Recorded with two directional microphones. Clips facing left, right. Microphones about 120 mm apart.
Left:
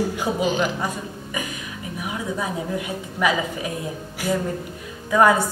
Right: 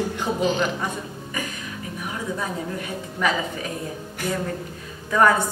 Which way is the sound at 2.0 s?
15° left (ahead or behind).